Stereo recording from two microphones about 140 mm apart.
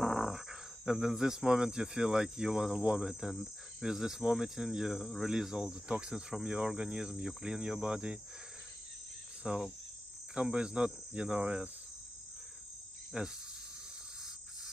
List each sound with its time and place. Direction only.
0.0 s speech: centre (ahead or behind)
9.4 s cricket: 5° right (ahead or behind)
13.1 s cricket: 5° right (ahead or behind)